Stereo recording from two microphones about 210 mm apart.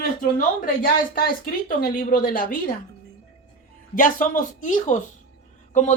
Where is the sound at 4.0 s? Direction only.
40° left (ahead or behind).